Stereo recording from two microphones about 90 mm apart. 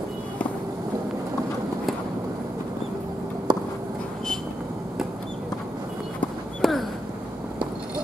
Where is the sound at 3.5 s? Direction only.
50° right (ahead or behind).